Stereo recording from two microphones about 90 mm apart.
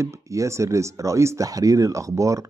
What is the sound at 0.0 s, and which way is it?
Speech, 35° right (ahead or behind).